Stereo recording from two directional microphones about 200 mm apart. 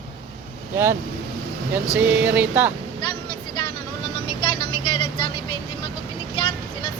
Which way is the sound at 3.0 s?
25° left (ahead or behind).